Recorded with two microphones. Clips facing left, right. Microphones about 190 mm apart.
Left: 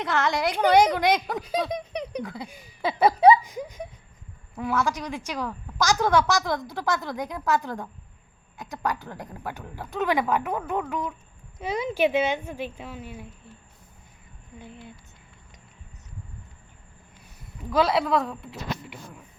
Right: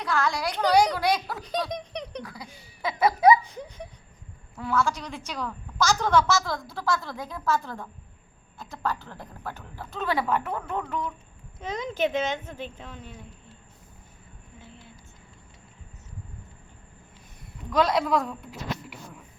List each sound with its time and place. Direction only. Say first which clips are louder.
0.0 s speech: left 2 dB; 20° left (ahead or behind)
1.7 s a sound: left 4 dB; 5° left (ahead or behind)
2.2 s speech: left 6 dB; 25° left (ahead or behind)
2.8 s laughter: left 2 dB; 30° left (ahead or behind)
3.4 s a sound: left 4 dB; 10° left (ahead or behind)
4.5 s a woman's voice: even; 15° left (ahead or behind)
17.7 s speech: left 1 dB; 5° left (ahead or behind)